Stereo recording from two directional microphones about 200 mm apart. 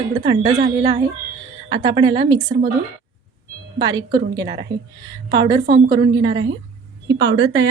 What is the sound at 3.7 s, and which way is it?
A woman's voice, 20° right (ahead or behind).